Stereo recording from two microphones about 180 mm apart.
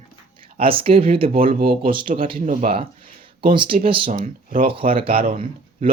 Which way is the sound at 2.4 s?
50° right (ahead or behind).